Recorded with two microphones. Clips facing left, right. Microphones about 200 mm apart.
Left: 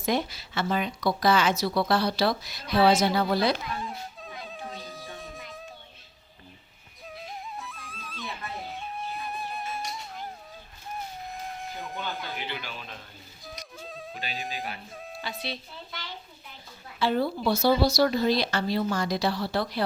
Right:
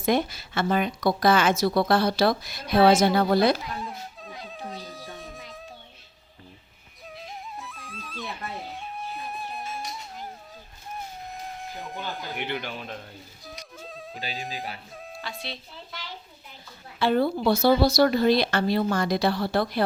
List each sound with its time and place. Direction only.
0.0 s speech: 55° right (ahead or behind)
3.8 s music: centre (ahead or behind)
7.1 s music: centre (ahead or behind)
11.3 s a sound: centre (ahead or behind)
12.4 s speech: 55° right (ahead or behind)
13.4 s music: centre (ahead or behind)
14.4 s speech: centre (ahead or behind)
17.0 s speech: 55° right (ahead or behind)